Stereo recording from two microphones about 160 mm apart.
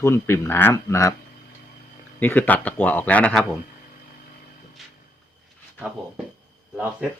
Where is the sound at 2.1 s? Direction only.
10° left (ahead or behind).